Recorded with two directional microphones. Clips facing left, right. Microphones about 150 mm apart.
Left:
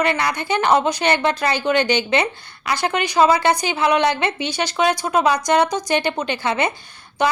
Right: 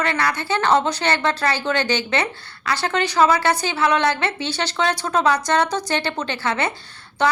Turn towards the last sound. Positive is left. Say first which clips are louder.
# even
turn(degrees=15)  # may be behind; listen again after turning